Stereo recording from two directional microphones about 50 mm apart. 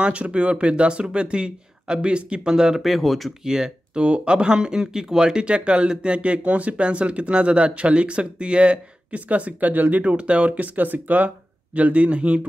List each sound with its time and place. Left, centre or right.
0.0 s speech: right
2.8 s speech: centre
3.4 s speech: centre